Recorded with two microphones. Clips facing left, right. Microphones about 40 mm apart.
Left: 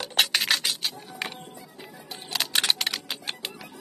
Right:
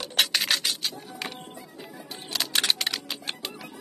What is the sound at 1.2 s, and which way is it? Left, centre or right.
Music, centre.